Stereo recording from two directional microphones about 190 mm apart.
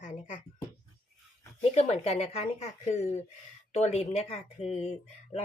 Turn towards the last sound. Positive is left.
turn(degrees=35)  # may be behind; listen again after turning